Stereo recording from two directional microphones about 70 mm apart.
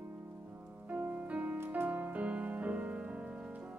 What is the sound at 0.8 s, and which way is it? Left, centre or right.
Music, right.